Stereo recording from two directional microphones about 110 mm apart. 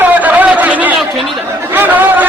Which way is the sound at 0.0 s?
15° right (ahead or behind).